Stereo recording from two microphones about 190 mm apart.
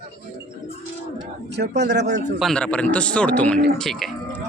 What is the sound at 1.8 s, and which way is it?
Speech, 65° right (ahead or behind).